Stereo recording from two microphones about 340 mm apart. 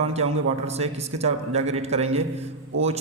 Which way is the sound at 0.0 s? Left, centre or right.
Centre.